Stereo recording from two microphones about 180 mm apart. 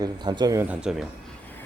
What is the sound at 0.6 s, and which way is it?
Speech, 5° right (ahead or behind).